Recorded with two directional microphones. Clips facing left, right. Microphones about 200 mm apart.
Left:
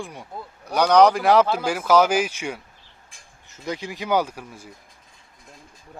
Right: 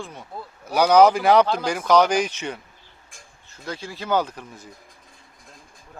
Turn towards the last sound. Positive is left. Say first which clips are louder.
# left 1 dB
turn(degrees=10)  # may be behind; listen again after turning